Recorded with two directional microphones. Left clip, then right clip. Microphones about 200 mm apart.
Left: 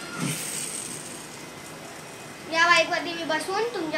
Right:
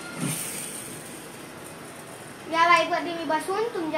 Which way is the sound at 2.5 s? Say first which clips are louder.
Even; 15° left (ahead or behind).